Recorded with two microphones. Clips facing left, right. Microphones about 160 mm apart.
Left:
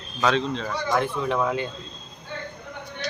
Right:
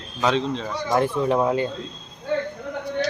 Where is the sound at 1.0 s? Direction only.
35° right (ahead or behind).